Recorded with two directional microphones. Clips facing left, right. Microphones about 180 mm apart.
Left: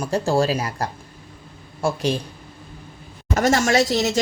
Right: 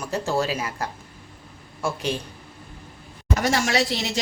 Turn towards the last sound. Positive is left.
turn(degrees=45)  # may be behind; listen again after turning